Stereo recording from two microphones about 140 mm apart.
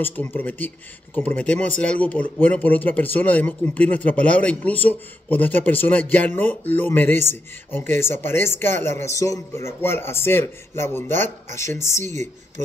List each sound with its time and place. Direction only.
0.0 s speech: 15° left (ahead or behind)
12.0 s speech: 55° right (ahead or behind)